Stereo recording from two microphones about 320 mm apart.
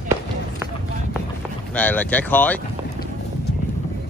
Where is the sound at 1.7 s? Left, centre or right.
Centre.